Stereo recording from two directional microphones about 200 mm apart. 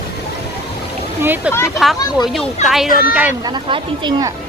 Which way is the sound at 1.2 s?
10° right (ahead or behind).